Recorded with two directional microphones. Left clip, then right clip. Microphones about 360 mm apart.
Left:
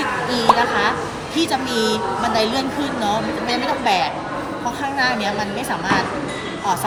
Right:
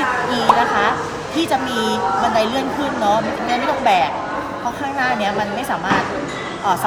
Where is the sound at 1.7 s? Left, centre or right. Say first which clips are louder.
Even; centre.